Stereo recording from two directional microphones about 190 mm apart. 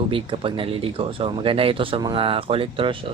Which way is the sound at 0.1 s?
25° right (ahead or behind).